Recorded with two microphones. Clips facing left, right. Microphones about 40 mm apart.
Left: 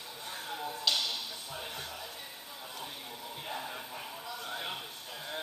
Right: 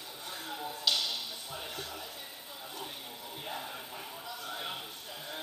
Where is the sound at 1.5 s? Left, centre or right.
Left.